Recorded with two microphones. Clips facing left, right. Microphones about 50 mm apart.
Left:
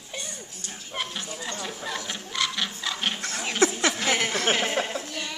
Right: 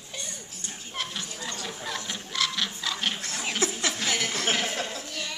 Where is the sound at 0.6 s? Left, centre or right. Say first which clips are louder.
Left 2 dB; centre.